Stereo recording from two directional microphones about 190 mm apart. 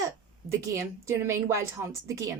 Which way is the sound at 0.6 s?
15° right (ahead or behind).